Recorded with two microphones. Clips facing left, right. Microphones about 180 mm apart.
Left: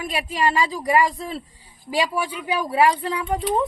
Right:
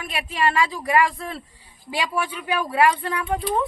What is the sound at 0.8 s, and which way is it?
Speech, 15° left (ahead or behind).